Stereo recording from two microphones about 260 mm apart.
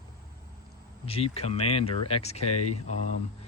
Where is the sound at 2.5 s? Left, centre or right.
Left.